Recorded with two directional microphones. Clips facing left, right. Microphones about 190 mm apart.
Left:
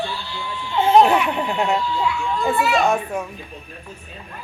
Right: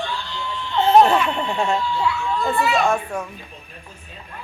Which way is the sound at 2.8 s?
20° left (ahead or behind).